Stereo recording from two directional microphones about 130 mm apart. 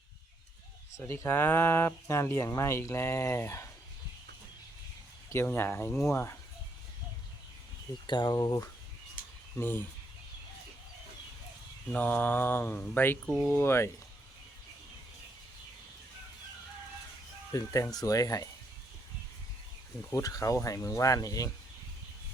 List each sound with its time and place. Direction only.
0.9 s speech: 20° left (ahead or behind)
5.3 s speech: 20° left (ahead or behind)
8.0 s speech: 35° left (ahead or behind)
9.6 s speech: 15° left (ahead or behind)
11.9 s speech: 10° left (ahead or behind)
17.5 s speech: 25° left (ahead or behind)
20.1 s speech: 25° left (ahead or behind)